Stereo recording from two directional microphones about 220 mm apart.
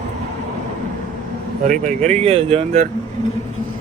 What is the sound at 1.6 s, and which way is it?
Speech, 35° right (ahead or behind).